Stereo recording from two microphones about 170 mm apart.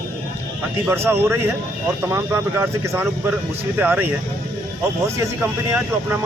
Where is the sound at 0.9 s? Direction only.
15° right (ahead or behind).